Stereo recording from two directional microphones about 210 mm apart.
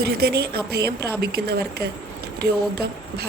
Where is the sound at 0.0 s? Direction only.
50° right (ahead or behind).